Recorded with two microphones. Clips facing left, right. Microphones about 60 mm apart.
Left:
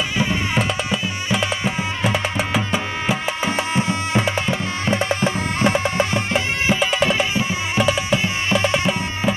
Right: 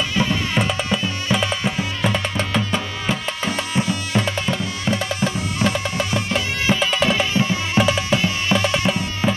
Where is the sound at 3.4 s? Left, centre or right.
Left.